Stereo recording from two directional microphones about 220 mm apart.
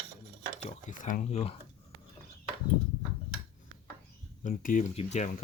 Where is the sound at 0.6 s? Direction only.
35° left (ahead or behind).